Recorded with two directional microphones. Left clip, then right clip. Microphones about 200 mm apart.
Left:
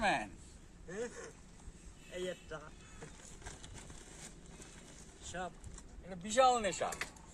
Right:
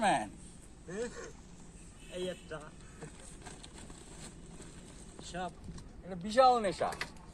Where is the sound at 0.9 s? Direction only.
10° left (ahead or behind).